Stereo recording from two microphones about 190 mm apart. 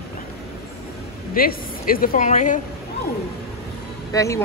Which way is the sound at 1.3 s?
50° left (ahead or behind).